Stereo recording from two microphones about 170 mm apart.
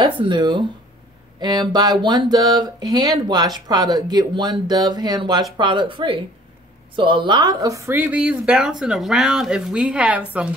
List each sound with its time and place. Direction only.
0.0 s speech: 30° right (ahead or behind); by 10.5 s 10° right (ahead or behind)